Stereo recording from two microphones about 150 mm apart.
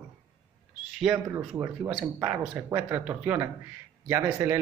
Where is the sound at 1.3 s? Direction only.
15° right (ahead or behind).